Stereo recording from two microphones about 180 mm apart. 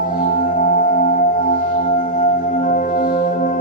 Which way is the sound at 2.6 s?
45° left (ahead or behind).